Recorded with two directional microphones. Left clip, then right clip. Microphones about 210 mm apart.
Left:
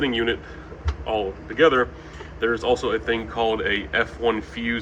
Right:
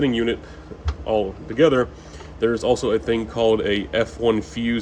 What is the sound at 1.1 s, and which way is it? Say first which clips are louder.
Speech: right 3 dB; 50° right (ahead or behind).